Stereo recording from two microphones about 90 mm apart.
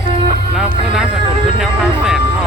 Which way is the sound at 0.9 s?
5° right (ahead or behind).